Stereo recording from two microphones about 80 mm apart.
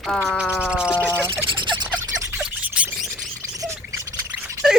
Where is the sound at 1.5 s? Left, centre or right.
Right.